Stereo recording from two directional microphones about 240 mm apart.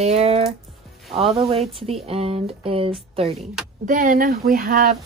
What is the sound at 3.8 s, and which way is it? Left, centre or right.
Speech, right.